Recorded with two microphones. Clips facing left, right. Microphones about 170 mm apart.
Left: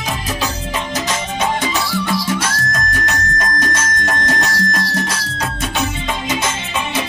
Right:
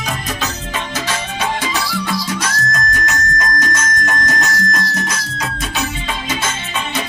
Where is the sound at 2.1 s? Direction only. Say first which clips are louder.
Left 2 dB; 25° left (ahead or behind).